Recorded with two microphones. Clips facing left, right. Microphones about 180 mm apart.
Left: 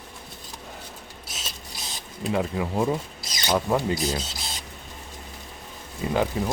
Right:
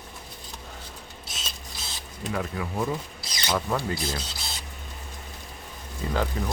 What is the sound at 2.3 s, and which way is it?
Speech, 25° left (ahead or behind).